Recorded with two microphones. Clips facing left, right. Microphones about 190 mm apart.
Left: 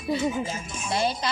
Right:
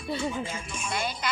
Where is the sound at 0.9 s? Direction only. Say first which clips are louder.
Left 7 dB; 30° left (ahead or behind).